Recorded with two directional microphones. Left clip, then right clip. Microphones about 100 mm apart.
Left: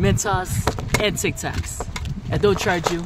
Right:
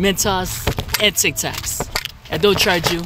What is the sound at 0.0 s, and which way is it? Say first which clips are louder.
Speech: right 4 dB; 30° left (ahead or behind).